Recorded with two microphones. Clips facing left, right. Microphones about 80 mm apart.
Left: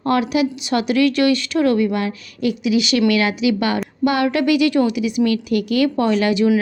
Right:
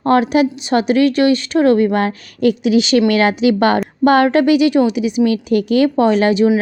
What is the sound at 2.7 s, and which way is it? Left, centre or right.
Speech, right.